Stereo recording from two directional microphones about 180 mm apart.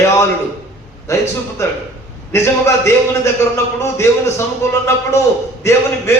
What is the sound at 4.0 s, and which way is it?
A man's voice, 15° left (ahead or behind).